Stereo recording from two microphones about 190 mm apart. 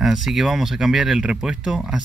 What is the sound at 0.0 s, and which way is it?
Speech, centre (ahead or behind).